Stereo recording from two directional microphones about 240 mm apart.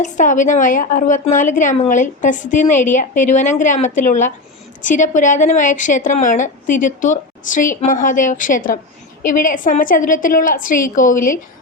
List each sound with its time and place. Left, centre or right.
0.0 s a woman's voice: left